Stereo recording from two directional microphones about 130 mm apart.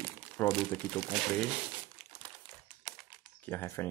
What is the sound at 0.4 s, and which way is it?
Speech, 15° left (ahead or behind).